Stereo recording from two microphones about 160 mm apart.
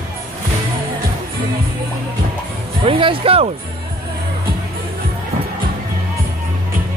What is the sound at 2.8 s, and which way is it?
Speech, 35° right (ahead or behind).